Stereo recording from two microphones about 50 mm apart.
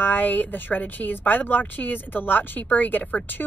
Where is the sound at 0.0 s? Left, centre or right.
Left.